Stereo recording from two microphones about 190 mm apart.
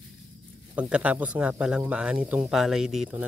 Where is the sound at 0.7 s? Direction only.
5° right (ahead or behind).